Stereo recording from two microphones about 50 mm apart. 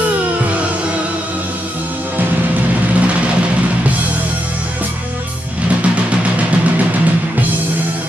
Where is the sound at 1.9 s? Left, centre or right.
Right.